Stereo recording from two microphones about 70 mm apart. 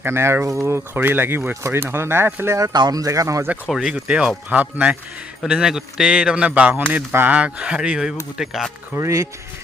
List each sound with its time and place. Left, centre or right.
0.0 s speech: right
0.9 s speech: right
2.7 s speech: right
3.7 s a man's voice: centre; by 4.9 s right
5.5 s a man's voice: centre; by 7.3 s right
7.3 s a man's voice: centre
9.0 s speech: right